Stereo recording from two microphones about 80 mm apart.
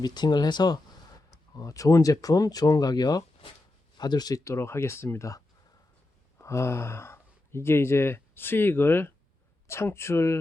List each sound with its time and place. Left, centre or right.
0.0 s speech: left
1.3 s speech: left
4.4 s speech: left
6.4 s speech: left